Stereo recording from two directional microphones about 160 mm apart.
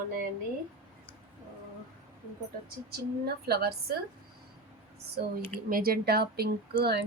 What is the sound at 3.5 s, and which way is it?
Speech, 80° right.